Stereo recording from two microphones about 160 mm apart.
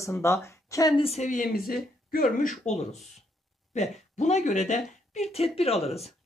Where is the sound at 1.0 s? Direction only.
45° left (ahead or behind).